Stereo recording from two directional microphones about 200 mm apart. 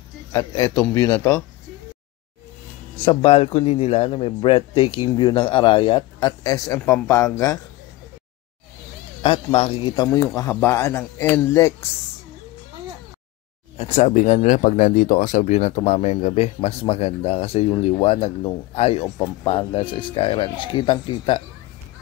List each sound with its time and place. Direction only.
0.3 s speech: 15° left (ahead or behind)
3.1 s a man's voice: 30° left (ahead or behind)
9.2 s a man's voice: 25° left (ahead or behind)
10.0 s speech: 15° left (ahead or behind)
13.7 s speech: 30° left (ahead or behind)
19.0 s a man's voice: 20° left (ahead or behind)